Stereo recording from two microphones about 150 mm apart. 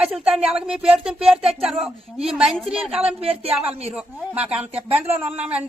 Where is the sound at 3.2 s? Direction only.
40° right (ahead or behind).